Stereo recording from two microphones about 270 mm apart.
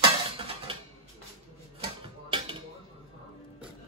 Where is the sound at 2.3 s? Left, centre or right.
Centre.